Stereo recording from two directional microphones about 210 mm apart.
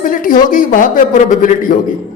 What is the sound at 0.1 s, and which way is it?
A woman's voice, 40° left (ahead or behind).